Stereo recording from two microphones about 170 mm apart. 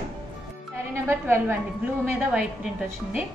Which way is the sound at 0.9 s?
15° right (ahead or behind).